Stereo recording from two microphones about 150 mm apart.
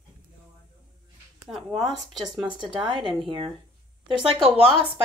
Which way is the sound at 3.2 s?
35° right (ahead or behind).